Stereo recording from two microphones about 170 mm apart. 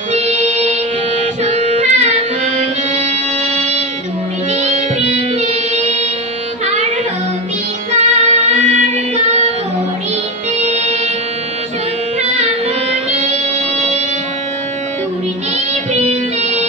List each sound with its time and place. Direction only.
0.1 s music: 40° right (ahead or behind)
7.9 s music: 40° right (ahead or behind)
10.7 s music: 40° right (ahead or behind)
12.2 s music: 40° right (ahead or behind)
15.5 s music: 40° right (ahead or behind)